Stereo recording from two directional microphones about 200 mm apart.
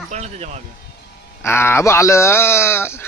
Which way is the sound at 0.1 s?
35° right (ahead or behind).